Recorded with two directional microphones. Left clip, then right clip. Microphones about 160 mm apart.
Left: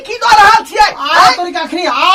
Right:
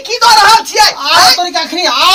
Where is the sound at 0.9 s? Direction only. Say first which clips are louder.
Right 1 dB; 5° left (ahead or behind).